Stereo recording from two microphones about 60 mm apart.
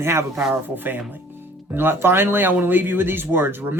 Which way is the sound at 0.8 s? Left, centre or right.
Right.